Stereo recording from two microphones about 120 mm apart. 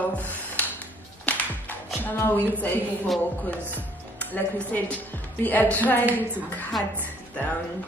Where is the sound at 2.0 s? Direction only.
15° left (ahead or behind).